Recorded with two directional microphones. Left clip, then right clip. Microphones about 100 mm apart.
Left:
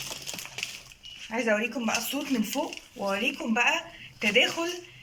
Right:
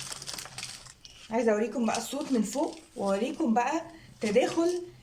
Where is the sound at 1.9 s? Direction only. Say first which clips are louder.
Left 1 dB; 40° right (ahead or behind).